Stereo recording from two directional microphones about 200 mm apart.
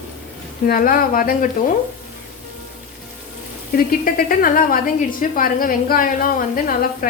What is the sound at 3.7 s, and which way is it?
A woman's voice, 45° left (ahead or behind).